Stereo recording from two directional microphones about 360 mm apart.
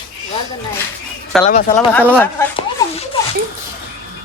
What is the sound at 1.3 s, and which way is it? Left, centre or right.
Speech, centre.